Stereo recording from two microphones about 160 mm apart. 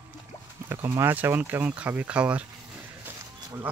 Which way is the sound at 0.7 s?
15° right (ahead or behind).